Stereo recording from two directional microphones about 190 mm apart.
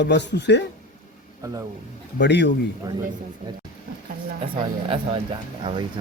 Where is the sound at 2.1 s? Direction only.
65° left (ahead or behind).